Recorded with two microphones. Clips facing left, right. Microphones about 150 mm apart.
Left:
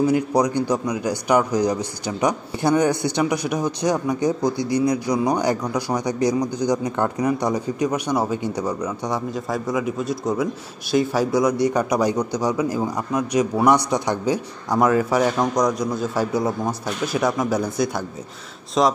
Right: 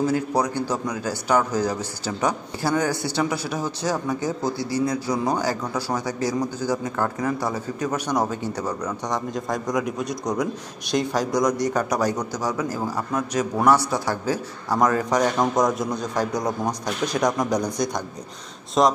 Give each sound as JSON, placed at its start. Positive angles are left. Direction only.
{"t": 0.0, "sound": "a man's voice", "side_deg": 15}